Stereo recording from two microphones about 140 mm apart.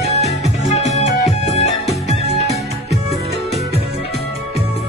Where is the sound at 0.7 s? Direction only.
55° left (ahead or behind).